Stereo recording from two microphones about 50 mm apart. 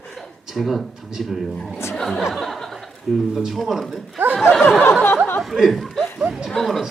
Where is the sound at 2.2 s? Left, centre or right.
Centre.